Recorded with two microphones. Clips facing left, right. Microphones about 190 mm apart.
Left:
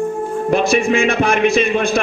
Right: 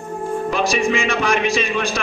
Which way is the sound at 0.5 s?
55° left (ahead or behind).